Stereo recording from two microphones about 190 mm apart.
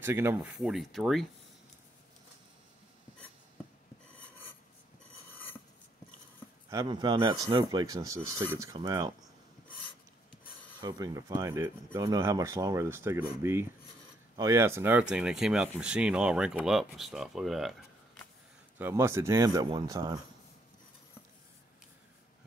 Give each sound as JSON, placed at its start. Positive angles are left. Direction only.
{"t": 0.0, "sound": "speech", "side_deg": -10}
{"t": 0.6, "sound": "speech", "side_deg": 0}
{"t": 6.7, "sound": "speech", "side_deg": -20}
{"t": 10.8, "sound": "speech", "side_deg": -20}
{"t": 18.8, "sound": "speech", "side_deg": -15}